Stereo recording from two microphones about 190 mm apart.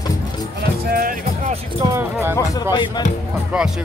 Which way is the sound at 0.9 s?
50° right (ahead or behind).